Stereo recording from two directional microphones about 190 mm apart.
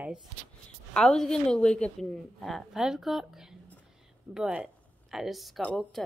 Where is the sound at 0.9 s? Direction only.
5° left (ahead or behind).